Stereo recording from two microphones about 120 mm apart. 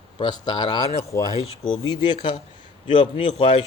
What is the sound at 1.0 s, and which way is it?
Speech, 25° left (ahead or behind).